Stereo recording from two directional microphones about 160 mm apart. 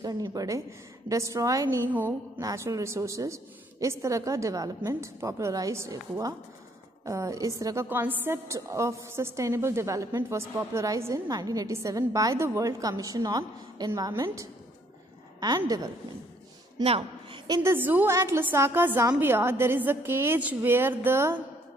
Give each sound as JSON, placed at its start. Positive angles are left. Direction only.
{"t": 0.0, "sound": "a woman's voice", "side_deg": -25}
{"t": 16.8, "sound": "speech", "side_deg": -35}
{"t": 17.5, "sound": "a woman's voice", "side_deg": -15}